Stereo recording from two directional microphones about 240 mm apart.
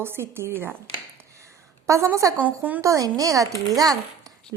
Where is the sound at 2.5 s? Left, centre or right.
Centre.